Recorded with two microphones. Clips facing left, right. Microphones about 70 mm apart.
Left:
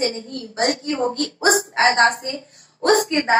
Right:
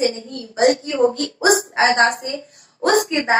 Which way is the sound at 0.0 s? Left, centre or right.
Left.